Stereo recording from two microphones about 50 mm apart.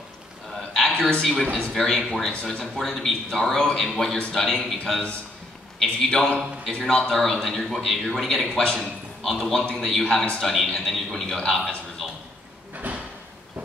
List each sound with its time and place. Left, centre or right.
0.6 s a sound: centre
1.1 s a man's voice: centre
5.8 s a man's voice: centre
12.7 s drawer open or close: right